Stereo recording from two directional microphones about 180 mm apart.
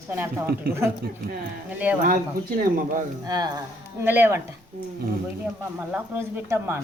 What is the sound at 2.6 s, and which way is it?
Speech, 50° right (ahead or behind).